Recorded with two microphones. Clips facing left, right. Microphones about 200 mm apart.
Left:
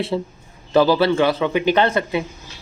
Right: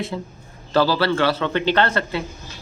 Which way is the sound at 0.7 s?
20° left (ahead or behind).